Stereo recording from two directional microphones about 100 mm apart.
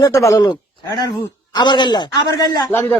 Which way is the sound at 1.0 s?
45° left (ahead or behind).